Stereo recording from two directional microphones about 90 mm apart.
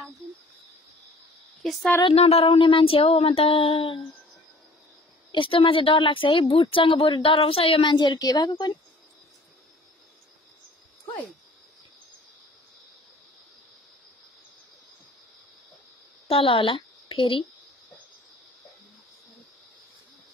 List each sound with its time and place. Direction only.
1.6 s a woman's voice: centre (ahead or behind)
2.0 s a sound: 90° left
5.3 s speech: 70° left (ahead or behind); by 7.9 s 90° left
7.9 s a woman's voice: 50° left (ahead or behind)
16.3 s a woman's voice: 75° left (ahead or behind)